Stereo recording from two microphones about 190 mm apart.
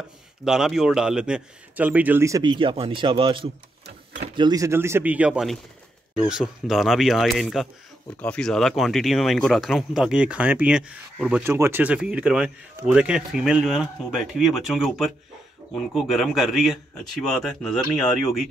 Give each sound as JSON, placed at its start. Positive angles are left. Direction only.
{"t": 0.5, "sound": "speech", "side_deg": -5}
{"t": 3.8, "sound": "a sound", "side_deg": -65}
{"t": 4.4, "sound": "speech", "side_deg": -20}